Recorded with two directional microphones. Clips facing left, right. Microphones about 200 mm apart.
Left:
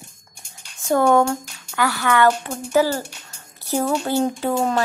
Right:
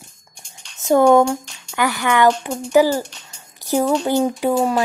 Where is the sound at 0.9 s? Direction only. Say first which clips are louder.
Right 4 dB; 15° right (ahead or behind).